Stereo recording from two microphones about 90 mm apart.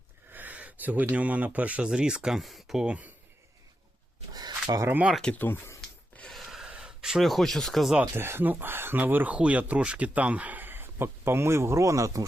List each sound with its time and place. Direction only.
0.3 s speech: 20° right (ahead or behind)
4.7 s speech: 50° right (ahead or behind)
5.2 s speech: 20° left (ahead or behind)
6.3 s a sound: centre (ahead or behind)
8.1 s speech: 25° right (ahead or behind)